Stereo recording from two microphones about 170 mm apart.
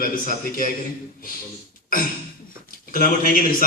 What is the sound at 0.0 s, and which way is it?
Speech, 55° left (ahead or behind).